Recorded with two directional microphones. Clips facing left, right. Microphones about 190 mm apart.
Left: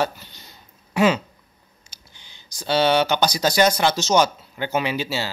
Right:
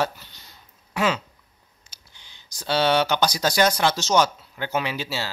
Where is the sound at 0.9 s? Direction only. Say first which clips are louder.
Left 5 dB; 10° left (ahead or behind).